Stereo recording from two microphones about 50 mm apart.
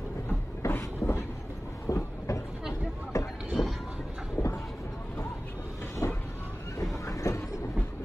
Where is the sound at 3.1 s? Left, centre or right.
Left.